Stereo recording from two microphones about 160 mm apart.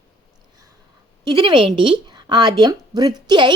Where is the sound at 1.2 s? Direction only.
30° right (ahead or behind).